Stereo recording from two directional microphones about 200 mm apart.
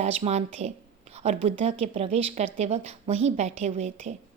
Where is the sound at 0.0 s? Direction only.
30° right (ahead or behind).